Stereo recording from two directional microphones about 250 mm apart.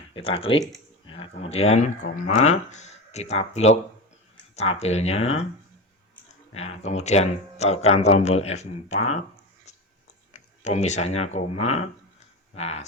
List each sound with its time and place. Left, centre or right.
0.1 s speech: left
6.5 s speech: left
10.3 s speech: left
12.5 s speech: left